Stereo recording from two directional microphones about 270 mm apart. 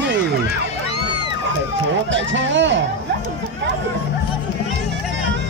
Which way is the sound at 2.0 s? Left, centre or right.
Right.